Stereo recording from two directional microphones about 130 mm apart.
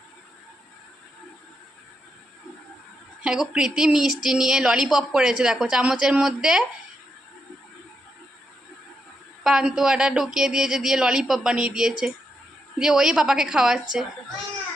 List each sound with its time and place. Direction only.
3.2 s speech: 5° right (ahead or behind)
9.4 s speech: 5° right (ahead or behind)